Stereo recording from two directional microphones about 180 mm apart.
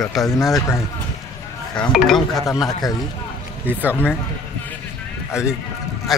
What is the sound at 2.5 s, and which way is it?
Speech, 20° left (ahead or behind).